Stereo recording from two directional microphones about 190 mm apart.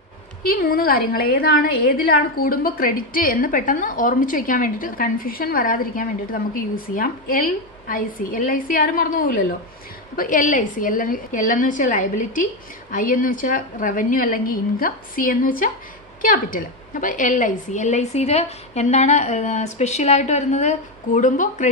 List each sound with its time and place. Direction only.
0.4 s a woman's voice: 50° left (ahead or behind)